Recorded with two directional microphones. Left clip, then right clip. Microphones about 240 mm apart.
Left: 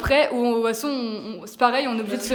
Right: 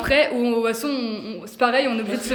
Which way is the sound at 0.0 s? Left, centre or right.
Centre.